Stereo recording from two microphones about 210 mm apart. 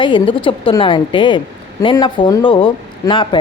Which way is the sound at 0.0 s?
20° left (ahead or behind).